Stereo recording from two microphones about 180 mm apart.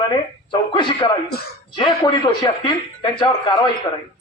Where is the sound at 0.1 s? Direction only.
25° left (ahead or behind).